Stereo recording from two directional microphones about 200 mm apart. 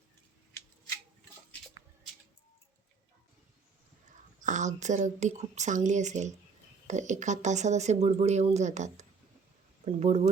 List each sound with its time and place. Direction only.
4.4 s speech: 40° right (ahead or behind)